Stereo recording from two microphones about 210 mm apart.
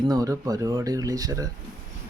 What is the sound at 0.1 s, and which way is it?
Speech, 15° right (ahead or behind).